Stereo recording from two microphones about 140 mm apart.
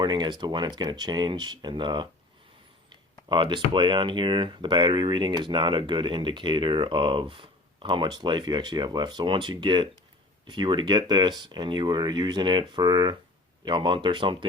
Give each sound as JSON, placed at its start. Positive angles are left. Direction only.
{"t": 0.0, "sound": "speech", "side_deg": -30}